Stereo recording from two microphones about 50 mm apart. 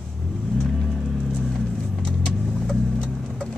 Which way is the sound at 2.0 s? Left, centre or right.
Centre.